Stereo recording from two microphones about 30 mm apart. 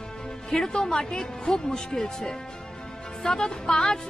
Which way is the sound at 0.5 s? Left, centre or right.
Left.